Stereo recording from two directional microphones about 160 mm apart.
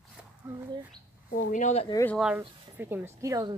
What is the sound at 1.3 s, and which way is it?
Speech, 50° left (ahead or behind).